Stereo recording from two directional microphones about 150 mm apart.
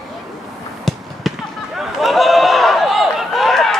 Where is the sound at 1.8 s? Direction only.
Centre (ahead or behind).